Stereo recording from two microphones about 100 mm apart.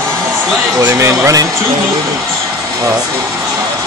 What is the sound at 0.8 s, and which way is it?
Speech, 30° right (ahead or behind).